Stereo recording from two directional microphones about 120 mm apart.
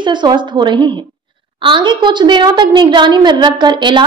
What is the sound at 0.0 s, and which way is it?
A woman's voice, 40° right (ahead or behind).